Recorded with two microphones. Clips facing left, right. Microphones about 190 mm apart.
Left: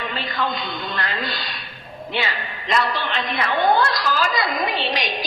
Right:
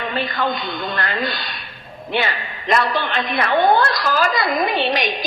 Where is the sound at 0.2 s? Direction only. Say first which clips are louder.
Right 4 dB; 55° right (ahead or behind).